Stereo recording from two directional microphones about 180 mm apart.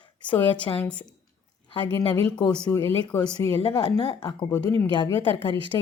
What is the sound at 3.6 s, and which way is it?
Speech, 30° left (ahead or behind).